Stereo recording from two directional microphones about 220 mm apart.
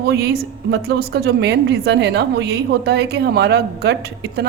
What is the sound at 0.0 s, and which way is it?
A woman's voice, 45° right (ahead or behind).